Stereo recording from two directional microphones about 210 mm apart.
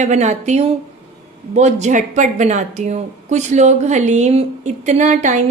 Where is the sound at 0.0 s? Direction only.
35° right (ahead or behind).